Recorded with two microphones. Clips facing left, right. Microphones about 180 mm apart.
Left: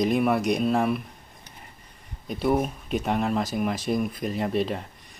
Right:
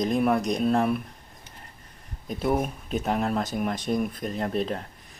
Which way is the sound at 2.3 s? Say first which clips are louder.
Left 2 dB; centre (ahead or behind).